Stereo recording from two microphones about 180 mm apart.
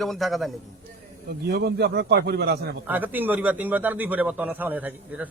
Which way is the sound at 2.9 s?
10° right (ahead or behind).